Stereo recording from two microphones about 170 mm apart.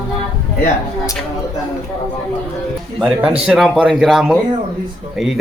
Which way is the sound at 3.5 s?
5° right (ahead or behind).